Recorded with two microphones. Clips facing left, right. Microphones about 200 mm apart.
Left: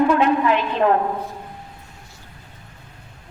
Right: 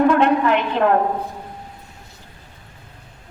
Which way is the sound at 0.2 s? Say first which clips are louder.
Right 1 dB; 60° right (ahead or behind).